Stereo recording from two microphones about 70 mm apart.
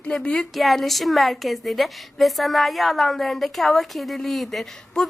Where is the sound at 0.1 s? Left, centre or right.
Centre.